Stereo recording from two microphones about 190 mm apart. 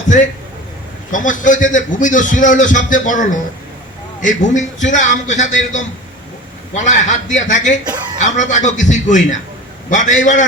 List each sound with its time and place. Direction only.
1.1 s a man's voice: 45° left (ahead or behind)